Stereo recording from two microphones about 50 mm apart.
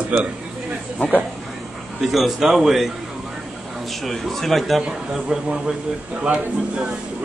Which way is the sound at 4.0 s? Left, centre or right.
Centre.